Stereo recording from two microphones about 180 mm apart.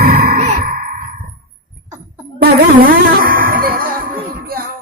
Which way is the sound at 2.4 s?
55° right (ahead or behind).